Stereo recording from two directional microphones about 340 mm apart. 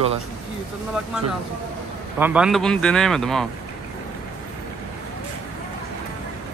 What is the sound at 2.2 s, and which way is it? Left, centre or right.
Speech, centre.